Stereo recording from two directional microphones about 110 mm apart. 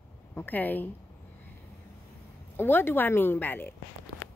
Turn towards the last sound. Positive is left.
turn(degrees=15)  # may be behind; listen again after turning